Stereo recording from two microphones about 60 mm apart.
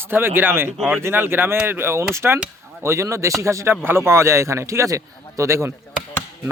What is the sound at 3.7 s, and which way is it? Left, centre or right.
A man's voice, right.